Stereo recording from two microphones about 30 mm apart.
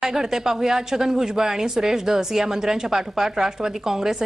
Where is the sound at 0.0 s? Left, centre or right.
Centre.